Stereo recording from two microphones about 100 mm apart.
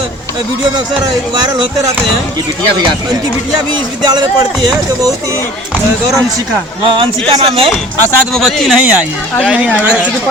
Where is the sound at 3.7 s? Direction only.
45° right (ahead or behind).